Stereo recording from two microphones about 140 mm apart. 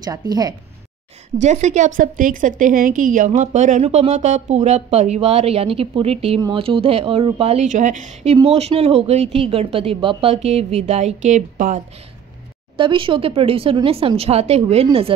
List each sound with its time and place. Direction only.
0.0 s speech: 30° right (ahead or behind)
1.4 s a woman's voice: 55° right (ahead or behind)
12.7 s speech: 35° right (ahead or behind)